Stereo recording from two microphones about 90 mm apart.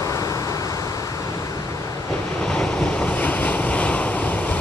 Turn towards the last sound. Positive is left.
turn(degrees=15)  # may be behind; listen again after turning